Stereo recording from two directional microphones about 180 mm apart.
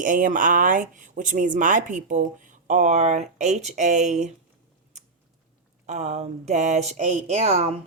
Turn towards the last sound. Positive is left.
turn(degrees=-35)  # may be behind; listen again after turning